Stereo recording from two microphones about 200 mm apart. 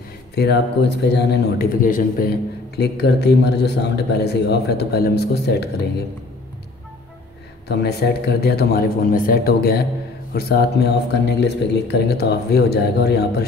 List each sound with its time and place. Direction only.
0.4 s speech: 55° left (ahead or behind)
2.8 s a man's voice: 55° left (ahead or behind)
7.6 s speech: 55° left (ahead or behind)